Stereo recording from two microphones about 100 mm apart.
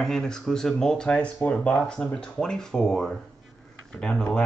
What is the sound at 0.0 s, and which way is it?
Speech, 5° left (ahead or behind).